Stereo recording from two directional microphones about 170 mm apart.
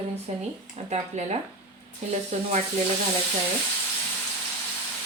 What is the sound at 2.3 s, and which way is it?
Speech, 40° right (ahead or behind).